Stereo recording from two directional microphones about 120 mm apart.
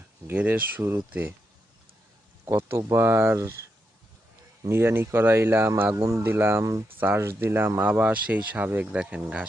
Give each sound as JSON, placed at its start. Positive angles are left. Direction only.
{"t": 0.3, "sound": "speech", "side_deg": -15}
{"t": 2.5, "sound": "speech", "side_deg": -20}
{"t": 4.6, "sound": "speech", "side_deg": -20}